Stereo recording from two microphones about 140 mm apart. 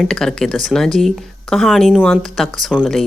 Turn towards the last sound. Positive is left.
turn(degrees=0)  # may be behind; listen again after turning